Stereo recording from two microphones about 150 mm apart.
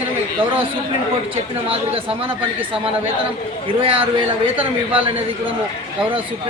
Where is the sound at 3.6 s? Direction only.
35° right (ahead or behind).